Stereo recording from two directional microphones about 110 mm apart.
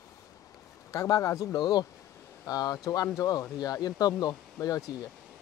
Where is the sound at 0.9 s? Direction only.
30° left (ahead or behind).